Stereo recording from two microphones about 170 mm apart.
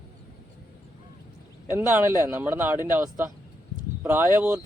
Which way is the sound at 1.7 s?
15° right (ahead or behind).